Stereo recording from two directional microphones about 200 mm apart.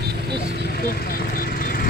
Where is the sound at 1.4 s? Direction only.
50° left (ahead or behind).